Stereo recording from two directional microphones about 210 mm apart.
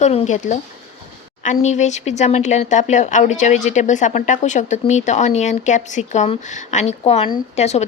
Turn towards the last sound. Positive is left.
turn(degrees=30)  # may be behind; listen again after turning